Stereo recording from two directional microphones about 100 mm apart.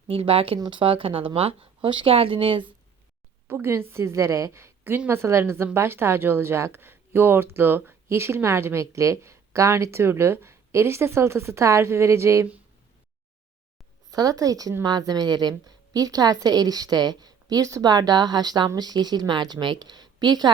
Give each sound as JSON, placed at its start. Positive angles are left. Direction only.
{"t": 0.1, "sound": "speech", "side_deg": -70}
{"t": 0.6, "sound": "speech", "side_deg": -55}
{"t": 3.4, "sound": "speech", "side_deg": -20}
{"t": 14.1, "sound": "a woman's voice", "side_deg": -40}